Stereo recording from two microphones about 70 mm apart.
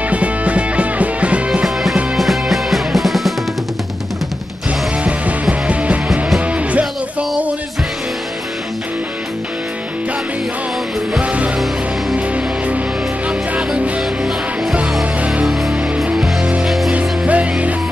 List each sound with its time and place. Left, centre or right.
0.1 s music: centre
2.1 s music: centre
5.0 s music: centre
11.1 s music: centre
13.3 s music: centre
16.1 s music: centre
17.3 s music: centre